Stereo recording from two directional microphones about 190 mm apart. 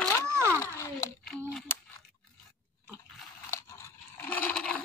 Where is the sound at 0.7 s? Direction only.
15° left (ahead or behind).